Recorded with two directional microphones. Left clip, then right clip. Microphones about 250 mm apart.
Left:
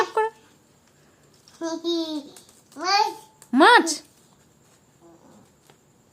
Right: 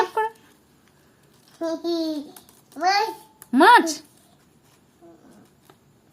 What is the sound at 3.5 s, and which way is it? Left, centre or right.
Speech, centre.